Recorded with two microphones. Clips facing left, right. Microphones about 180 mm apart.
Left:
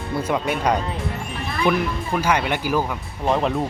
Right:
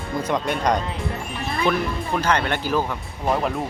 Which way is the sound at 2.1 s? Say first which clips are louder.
Left 1 dB; 10° left (ahead or behind).